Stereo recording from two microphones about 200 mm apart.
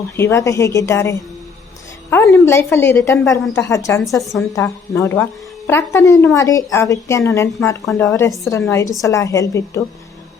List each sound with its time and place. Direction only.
0.2 s a woman's voice: 15° left (ahead or behind)